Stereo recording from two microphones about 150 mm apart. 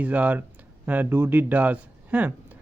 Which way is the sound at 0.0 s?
10° right (ahead or behind).